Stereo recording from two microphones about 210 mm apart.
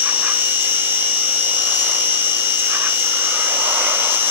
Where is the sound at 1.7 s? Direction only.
10° right (ahead or behind).